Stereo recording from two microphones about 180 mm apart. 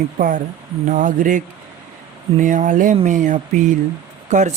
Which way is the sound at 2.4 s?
45° right (ahead or behind).